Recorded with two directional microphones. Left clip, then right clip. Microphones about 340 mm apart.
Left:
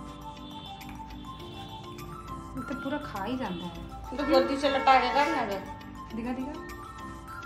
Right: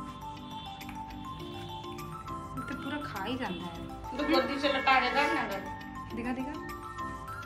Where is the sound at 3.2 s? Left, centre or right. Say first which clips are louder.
Left 2 dB; centre.